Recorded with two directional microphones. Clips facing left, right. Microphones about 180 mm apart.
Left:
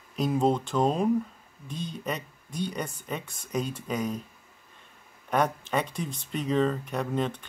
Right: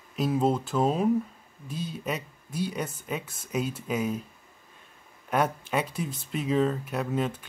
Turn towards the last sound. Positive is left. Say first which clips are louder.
# even
turn(degrees=-5)  # may be behind; listen again after turning